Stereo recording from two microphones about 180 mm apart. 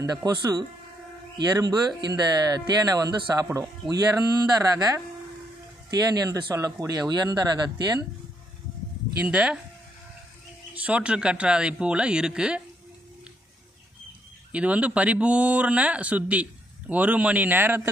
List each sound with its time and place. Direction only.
0.0 s speech: 20° right (ahead or behind)
9.2 s speech: 5° right (ahead or behind)
10.8 s speech: 5° right (ahead or behind)
14.5 s speech: 5° right (ahead or behind)